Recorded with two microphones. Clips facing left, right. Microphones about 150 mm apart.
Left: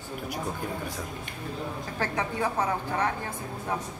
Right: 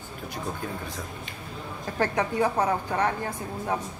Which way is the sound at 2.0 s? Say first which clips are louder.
Right 5 dB; 15° right (ahead or behind).